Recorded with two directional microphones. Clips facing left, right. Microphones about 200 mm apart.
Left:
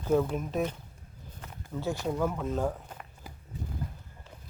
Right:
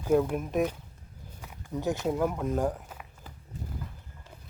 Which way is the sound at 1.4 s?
15° right (ahead or behind).